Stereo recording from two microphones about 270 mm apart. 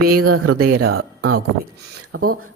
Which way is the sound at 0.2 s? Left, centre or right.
Right.